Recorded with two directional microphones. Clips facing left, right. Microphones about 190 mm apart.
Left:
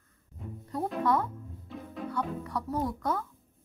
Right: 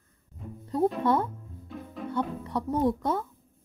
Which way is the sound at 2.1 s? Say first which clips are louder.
Right 4 dB; 25° right (ahead or behind).